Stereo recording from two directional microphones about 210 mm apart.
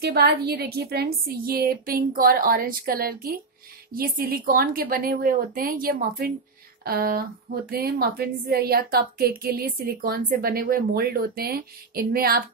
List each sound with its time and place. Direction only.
0.0 s a woman's voice: 50° right (ahead or behind)